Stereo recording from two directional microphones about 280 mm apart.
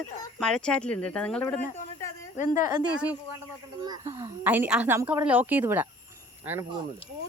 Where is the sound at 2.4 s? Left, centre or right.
Left.